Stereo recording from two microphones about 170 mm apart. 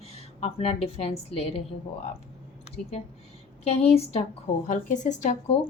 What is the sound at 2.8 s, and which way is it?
Speech, centre (ahead or behind).